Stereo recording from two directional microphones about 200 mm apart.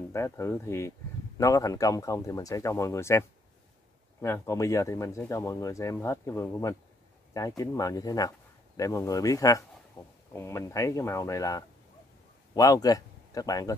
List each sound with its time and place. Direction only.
0.1 s a man's voice: 15° left (ahead or behind)